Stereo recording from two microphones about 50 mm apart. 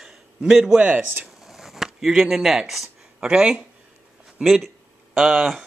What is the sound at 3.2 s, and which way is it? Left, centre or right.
Speech, centre.